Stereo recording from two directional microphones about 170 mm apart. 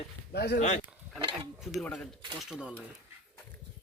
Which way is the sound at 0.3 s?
75° left (ahead or behind).